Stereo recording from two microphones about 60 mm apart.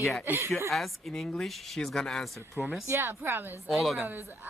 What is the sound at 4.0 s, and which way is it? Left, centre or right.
Speech, right.